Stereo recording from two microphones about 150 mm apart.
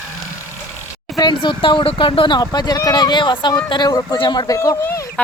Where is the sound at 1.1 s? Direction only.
30° left (ahead or behind).